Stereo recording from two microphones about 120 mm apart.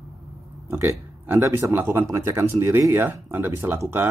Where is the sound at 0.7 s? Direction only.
20° right (ahead or behind).